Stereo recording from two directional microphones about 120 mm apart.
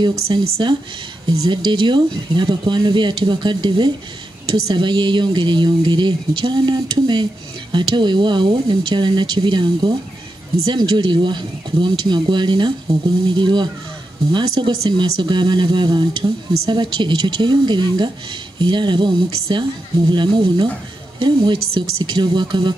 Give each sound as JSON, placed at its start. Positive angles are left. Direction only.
{"t": 0.0, "sound": "speech", "side_deg": -40}